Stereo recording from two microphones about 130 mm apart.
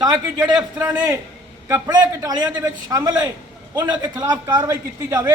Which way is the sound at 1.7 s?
30° right (ahead or behind).